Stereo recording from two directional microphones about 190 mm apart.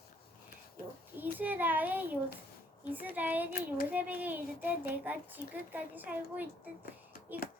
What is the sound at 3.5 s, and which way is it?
Child singing, 50° left (ahead or behind).